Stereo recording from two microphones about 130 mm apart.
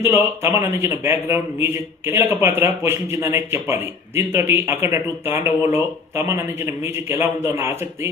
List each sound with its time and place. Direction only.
0.0 s a man's voice: 15° right (ahead or behind)